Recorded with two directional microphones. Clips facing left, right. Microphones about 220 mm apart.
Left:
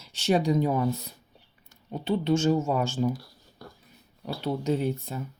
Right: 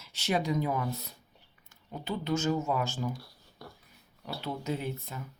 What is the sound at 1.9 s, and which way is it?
Speech, 30° left (ahead or behind).